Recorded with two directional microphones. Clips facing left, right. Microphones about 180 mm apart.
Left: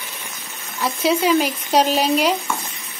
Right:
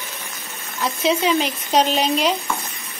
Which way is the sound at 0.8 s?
5° left (ahead or behind).